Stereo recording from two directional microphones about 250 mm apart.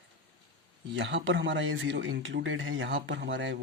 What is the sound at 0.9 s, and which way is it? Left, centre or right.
A man's voice, right.